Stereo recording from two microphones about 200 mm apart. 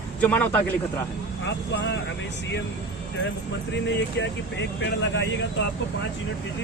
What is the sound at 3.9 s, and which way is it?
Speech, 60° left (ahead or behind).